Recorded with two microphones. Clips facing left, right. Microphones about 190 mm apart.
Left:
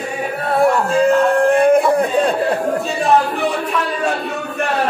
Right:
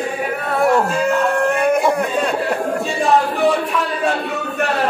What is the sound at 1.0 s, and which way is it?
Music, 30° left (ahead or behind).